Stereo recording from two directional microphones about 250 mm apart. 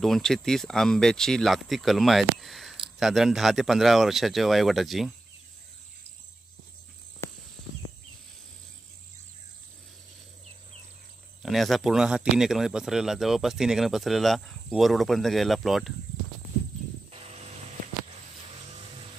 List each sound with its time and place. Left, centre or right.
0.0 s speech: centre
7.2 s a sound: centre
11.4 s speech: centre
17.1 s vehicle: right